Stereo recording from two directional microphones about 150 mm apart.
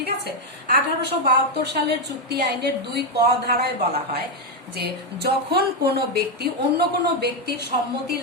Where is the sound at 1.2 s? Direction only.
90° right.